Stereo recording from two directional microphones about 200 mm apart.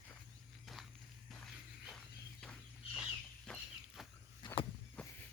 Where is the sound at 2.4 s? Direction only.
5° left (ahead or behind).